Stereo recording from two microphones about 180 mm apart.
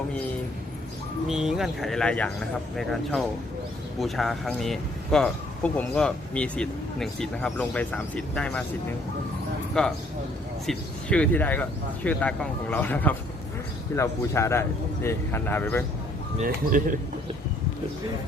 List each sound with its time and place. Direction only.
1.3 s speech: centre (ahead or behind)
9.8 s a man's voice: 5° left (ahead or behind)
16.4 s speech: 50° right (ahead or behind)